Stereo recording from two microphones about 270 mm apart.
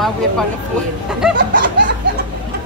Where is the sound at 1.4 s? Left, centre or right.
Right.